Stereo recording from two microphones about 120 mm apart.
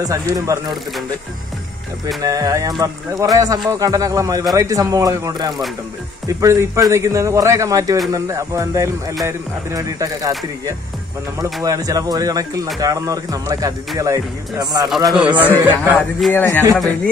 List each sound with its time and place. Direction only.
0.0 s speech: 25° right (ahead or behind)
2.2 s speech: 30° right (ahead or behind)
11.6 s speech: 30° right (ahead or behind)
15.0 s speech: 5° right (ahead or behind)
16.3 s speech: 20° left (ahead or behind)